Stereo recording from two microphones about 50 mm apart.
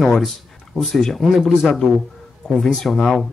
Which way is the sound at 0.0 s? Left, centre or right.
Centre.